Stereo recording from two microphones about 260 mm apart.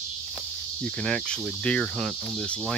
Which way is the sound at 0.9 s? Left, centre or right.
Centre.